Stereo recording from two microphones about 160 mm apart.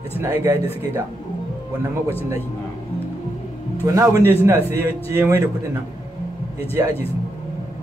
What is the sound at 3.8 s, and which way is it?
A man's voice, 20° right (ahead or behind).